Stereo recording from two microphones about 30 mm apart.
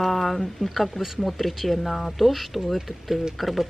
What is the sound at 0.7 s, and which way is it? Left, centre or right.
Speech, centre.